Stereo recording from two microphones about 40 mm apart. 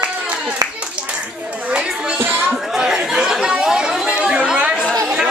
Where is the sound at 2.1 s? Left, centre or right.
Right.